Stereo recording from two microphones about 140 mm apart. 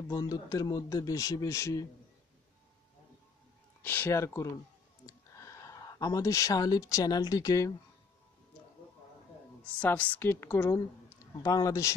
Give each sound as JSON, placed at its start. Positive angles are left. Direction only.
{"t": 0.1, "sound": "a man's voice", "side_deg": 25}
{"t": 3.8, "sound": "a woman's voice", "side_deg": 15}
{"t": 9.7, "sound": "a woman's voice", "side_deg": 10}